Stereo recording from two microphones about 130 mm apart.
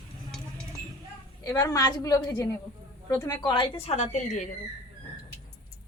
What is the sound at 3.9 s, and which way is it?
Speech, 65° left (ahead or behind).